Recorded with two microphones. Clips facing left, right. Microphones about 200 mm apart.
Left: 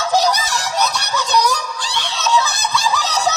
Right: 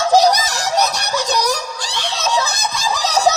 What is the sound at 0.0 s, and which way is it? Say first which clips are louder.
Screaming: right 4 dB; 35° right (ahead or behind).